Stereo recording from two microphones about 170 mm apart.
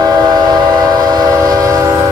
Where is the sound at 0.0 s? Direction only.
25° right (ahead or behind).